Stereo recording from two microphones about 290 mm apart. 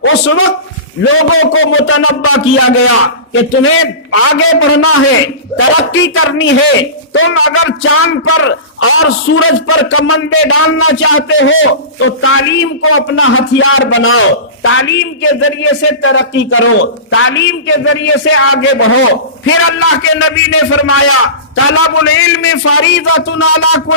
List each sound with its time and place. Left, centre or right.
0.0 s a man's voice: left